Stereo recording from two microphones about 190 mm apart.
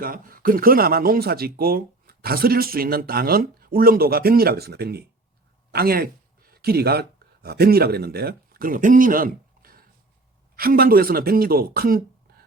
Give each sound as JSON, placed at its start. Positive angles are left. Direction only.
{"t": 0.0, "sound": "speech", "side_deg": -50}
{"t": 5.7, "sound": "a sound", "side_deg": -50}
{"t": 7.4, "sound": "speech", "side_deg": -55}